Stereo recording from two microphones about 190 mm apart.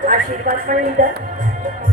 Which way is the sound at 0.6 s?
45° right (ahead or behind).